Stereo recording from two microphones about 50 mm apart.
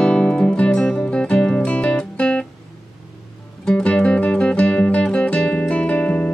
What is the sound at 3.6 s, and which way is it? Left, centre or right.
Music, left.